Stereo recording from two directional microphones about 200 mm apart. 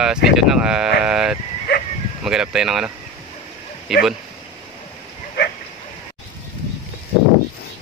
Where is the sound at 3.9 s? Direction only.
Centre (ahead or behind).